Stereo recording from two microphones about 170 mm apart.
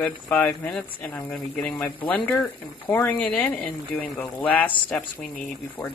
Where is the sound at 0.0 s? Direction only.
10° left (ahead or behind).